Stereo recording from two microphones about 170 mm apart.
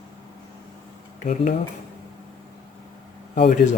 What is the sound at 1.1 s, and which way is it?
Speech, 50° left (ahead or behind).